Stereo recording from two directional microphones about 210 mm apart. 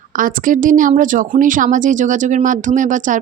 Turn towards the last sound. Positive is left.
turn(degrees=-35)  # may be behind; listen again after turning